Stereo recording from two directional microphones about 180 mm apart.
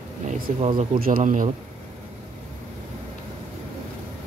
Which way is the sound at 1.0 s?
50° right (ahead or behind).